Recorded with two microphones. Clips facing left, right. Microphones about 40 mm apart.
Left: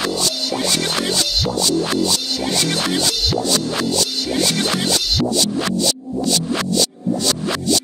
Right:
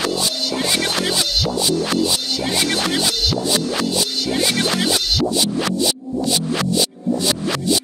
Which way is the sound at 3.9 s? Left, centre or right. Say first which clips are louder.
Even; centre.